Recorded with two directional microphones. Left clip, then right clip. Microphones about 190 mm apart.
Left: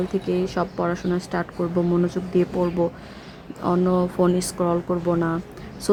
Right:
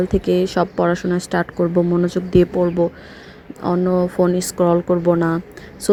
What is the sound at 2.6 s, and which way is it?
A woman's voice, 10° right (ahead or behind).